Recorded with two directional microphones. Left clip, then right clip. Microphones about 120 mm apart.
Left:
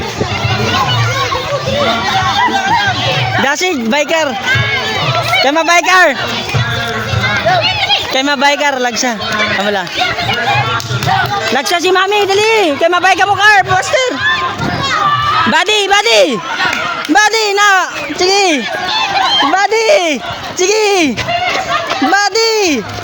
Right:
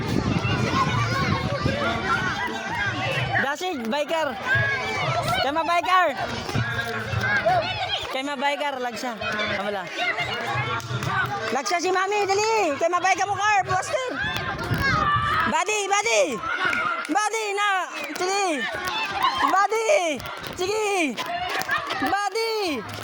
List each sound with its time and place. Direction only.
3.4 s speech: 60° left (ahead or behind)
5.5 s speech: 55° left (ahead or behind)
8.1 s speech: 50° left (ahead or behind)
12.2 s speech: 30° left (ahead or behind)
13.2 s speech: 60° left (ahead or behind)
15.4 s speech: 40° left (ahead or behind)
17.1 s speech: 50° left (ahead or behind)
19.5 s speech: 35° left (ahead or behind)
22.1 s a sound: 60° left (ahead or behind)